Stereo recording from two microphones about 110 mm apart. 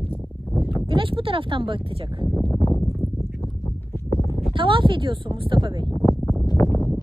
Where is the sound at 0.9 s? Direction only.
50° right (ahead or behind).